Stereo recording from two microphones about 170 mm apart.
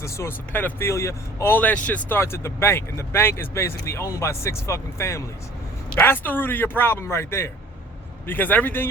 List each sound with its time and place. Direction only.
0.0 s speech: 15° left (ahead or behind)